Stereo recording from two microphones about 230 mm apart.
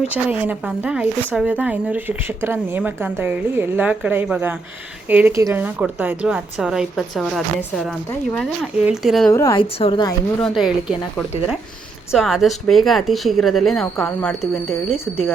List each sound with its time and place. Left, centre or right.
0.1 s speech: centre
9.3 s a woman's voice: centre
10.4 s speech: centre
12.1 s speech: centre